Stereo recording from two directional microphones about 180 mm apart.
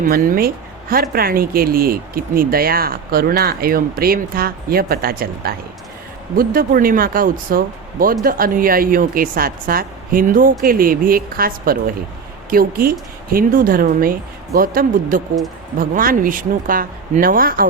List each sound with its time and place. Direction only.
0.0 s speech: 50° right (ahead or behind)